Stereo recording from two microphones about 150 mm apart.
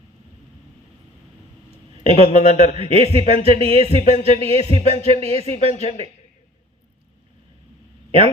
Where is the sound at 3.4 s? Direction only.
40° right (ahead or behind).